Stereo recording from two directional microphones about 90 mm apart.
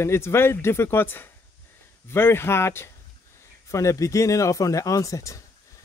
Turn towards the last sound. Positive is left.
turn(degrees=35)  # may be behind; listen again after turning